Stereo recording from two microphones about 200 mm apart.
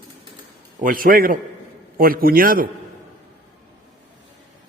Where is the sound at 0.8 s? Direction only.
45° right (ahead or behind).